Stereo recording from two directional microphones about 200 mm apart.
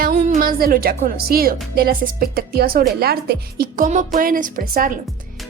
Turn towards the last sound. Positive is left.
turn(degrees=-45)  # may be behind; listen again after turning